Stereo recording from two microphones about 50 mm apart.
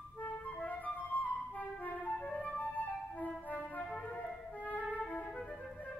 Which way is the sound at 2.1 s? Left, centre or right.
Centre.